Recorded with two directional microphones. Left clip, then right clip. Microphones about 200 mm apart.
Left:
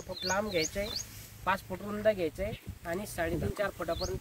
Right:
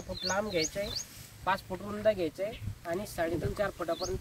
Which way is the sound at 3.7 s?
20° left (ahead or behind).